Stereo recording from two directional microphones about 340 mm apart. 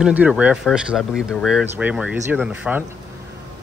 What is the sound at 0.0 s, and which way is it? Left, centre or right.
Speech, centre.